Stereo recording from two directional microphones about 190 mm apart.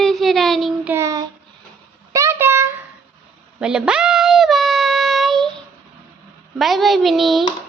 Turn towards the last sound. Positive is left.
turn(degrees=0)  # may be behind; listen again after turning